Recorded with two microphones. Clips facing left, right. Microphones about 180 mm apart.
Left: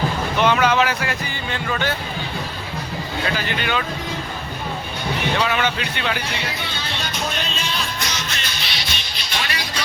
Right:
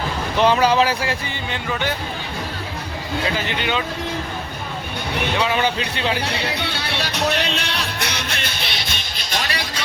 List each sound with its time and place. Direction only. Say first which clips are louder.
0.3 s speech: right 2 dB; 30° right (ahead or behind)
3.3 s speech: right 1 dB; 20° right (ahead or behind)
5.5 s speech: right 1 dB; 30° right (ahead or behind)
6.5 s music: right 3 dB; 70° right (ahead or behind); by 9.5 s 45° right (ahead or behind)